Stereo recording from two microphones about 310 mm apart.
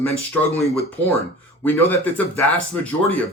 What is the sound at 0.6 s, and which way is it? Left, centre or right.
Speech, centre.